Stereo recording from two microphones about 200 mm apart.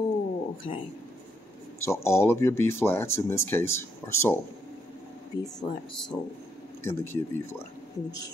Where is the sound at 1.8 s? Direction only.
15° left (ahead or behind).